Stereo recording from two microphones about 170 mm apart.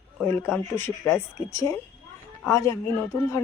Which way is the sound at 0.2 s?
10° left (ahead or behind).